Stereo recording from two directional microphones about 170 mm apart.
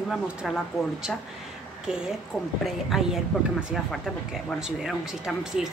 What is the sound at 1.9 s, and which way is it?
Speech, 5° right (ahead or behind).